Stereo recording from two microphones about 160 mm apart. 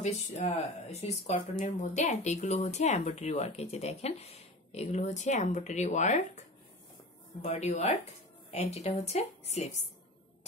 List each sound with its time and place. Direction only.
0.0 s speech: 45° left (ahead or behind)
7.4 s speech: 45° left (ahead or behind)